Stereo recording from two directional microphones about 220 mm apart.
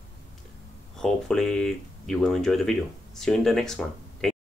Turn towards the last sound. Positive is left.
turn(degrees=0)  # may be behind; listen again after turning